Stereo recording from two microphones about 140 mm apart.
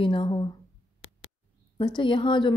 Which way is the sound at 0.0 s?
40° left (ahead or behind).